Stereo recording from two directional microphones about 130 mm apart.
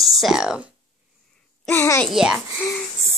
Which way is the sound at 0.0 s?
Centre (ahead or behind).